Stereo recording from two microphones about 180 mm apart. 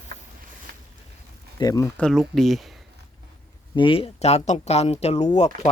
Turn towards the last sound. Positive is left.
turn(degrees=40)  # may be behind; listen again after turning